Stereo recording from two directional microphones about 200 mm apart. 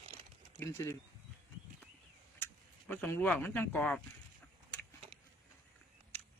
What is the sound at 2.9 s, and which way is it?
Speech, 10° left (ahead or behind).